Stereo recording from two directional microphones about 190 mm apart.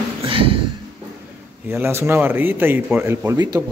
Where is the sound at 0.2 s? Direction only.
30° right (ahead or behind).